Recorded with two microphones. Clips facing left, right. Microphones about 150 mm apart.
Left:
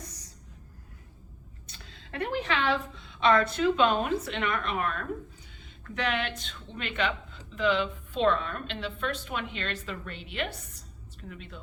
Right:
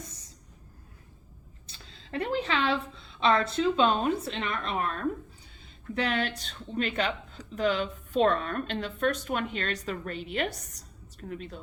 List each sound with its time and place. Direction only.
1.6 s a woman's voice: 30° right (ahead or behind)